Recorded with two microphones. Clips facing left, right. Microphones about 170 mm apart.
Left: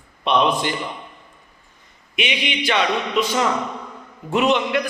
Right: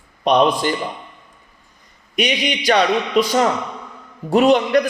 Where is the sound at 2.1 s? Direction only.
40° right (ahead or behind).